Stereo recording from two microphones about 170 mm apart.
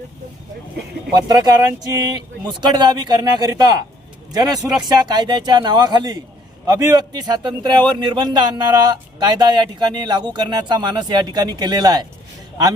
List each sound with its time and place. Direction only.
1.3 s a man's voice: 25° right (ahead or behind)